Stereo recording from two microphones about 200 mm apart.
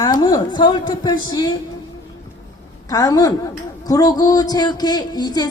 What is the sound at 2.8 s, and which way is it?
A woman's voice, 15° left (ahead or behind).